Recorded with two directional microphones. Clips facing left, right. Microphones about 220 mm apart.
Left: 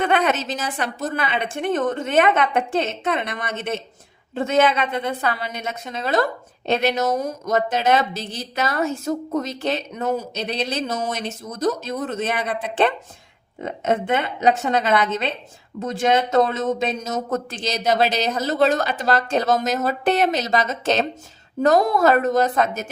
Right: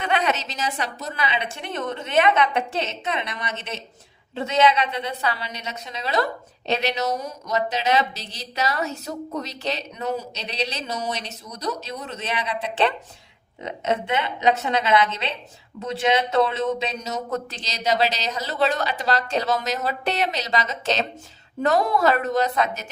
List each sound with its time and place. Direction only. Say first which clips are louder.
0.0 s a woman's voice: left 4 dB; 50° left (ahead or behind)